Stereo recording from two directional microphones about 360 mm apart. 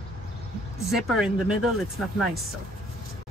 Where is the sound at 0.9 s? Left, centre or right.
Centre.